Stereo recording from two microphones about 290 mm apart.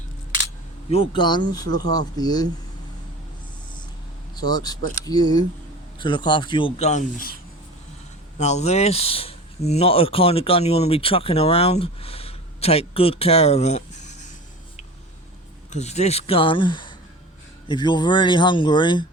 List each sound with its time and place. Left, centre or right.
0.9 s speech: centre
4.4 s speech: centre
8.4 s speech: left
15.7 s speech: left